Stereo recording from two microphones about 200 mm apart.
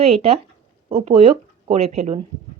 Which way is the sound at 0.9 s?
30° right (ahead or behind).